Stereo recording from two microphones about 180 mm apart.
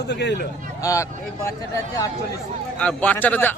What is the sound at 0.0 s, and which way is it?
Speech, 70° left (ahead or behind).